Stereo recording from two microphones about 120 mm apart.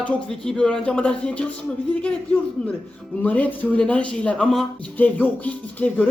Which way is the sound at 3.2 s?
15° left (ahead or behind).